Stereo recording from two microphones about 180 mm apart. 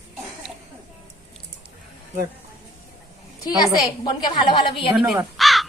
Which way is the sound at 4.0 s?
25° left (ahead or behind).